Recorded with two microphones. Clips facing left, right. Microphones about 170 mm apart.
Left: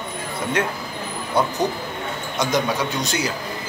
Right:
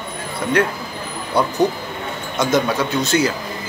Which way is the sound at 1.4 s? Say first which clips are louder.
Right 4 dB; 20° left (ahead or behind).